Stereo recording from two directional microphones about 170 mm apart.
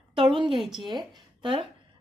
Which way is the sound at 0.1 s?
30° right (ahead or behind).